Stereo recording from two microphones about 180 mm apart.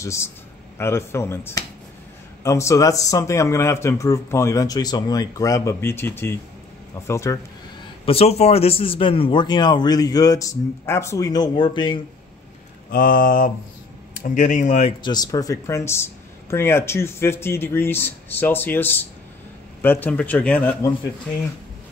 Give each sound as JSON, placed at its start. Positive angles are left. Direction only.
{"t": 0.0, "sound": "speech", "side_deg": 15}
{"t": 8.0, "sound": "a man's voice", "side_deg": 35}
{"t": 12.9, "sound": "speech", "side_deg": 50}
{"t": 15.0, "sound": "speech", "side_deg": 20}